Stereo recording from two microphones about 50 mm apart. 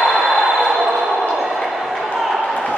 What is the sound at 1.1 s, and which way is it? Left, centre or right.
Basketball bounce, centre.